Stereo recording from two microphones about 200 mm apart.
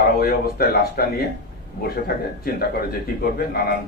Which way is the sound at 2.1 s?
50° left (ahead or behind).